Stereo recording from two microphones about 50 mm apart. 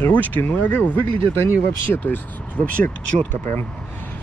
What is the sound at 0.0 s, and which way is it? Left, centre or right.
Speech, left.